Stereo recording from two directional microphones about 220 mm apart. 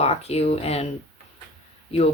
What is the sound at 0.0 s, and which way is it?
Speech, 30° left (ahead or behind).